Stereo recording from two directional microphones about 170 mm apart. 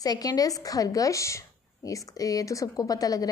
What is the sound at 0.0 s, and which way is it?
A woman's voice, 20° left (ahead or behind).